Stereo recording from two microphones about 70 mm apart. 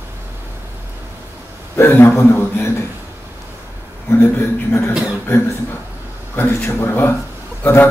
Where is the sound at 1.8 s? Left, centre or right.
Left.